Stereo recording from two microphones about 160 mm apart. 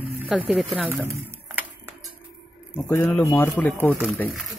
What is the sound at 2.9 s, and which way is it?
Speech, 10° left (ahead or behind).